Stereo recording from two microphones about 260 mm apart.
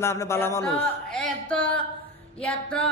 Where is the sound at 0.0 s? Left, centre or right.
Centre.